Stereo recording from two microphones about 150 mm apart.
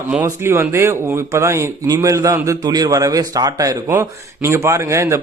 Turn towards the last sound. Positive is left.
turn(degrees=-20)  # may be behind; listen again after turning